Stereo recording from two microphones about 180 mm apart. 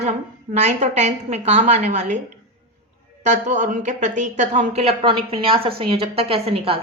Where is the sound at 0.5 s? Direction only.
40° right (ahead or behind).